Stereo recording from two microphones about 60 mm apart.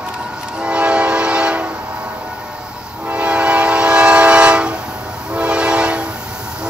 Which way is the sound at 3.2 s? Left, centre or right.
Right.